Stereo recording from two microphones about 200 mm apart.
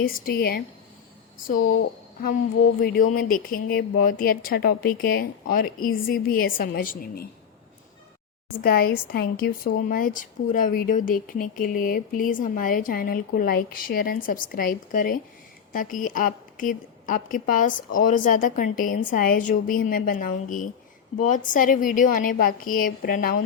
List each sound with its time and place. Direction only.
0.0 s speech: 50° left (ahead or behind)
2.8 s speech: 50° left (ahead or behind)
8.6 s a woman's voice: 45° left (ahead or behind)